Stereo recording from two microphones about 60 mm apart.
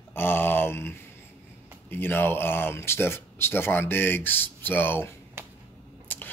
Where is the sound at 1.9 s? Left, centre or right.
Left.